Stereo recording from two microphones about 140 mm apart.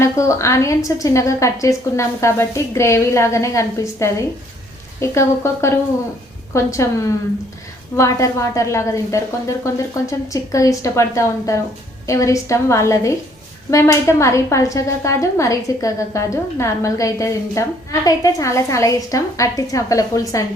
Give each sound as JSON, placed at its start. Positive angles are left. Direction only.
{"t": 0.0, "sound": "a woman's voice", "side_deg": 20}